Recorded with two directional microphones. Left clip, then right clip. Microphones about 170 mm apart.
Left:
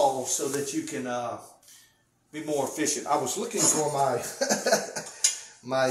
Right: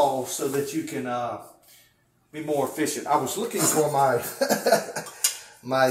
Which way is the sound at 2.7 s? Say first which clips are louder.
Right 3 dB; 20° left (ahead or behind).